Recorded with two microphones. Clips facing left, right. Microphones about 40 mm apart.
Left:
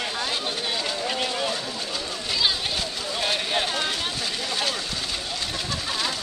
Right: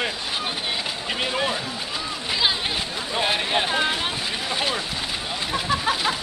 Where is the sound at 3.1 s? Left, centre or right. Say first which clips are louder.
Right 3 dB; centre.